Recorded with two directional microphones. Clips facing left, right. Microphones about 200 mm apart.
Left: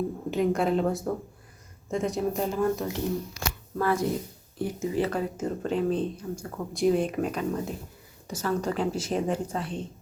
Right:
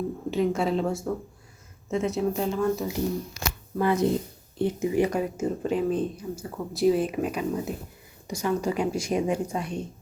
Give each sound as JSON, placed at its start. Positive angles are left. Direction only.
{"t": 0.3, "sound": "speech", "side_deg": 0}
{"t": 3.8, "sound": "speech", "side_deg": -20}